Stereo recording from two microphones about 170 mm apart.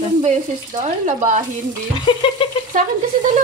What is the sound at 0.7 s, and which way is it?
Speech, 45° right (ahead or behind).